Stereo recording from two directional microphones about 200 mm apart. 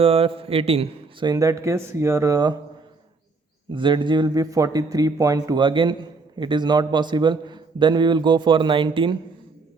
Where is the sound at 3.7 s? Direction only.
25° right (ahead or behind).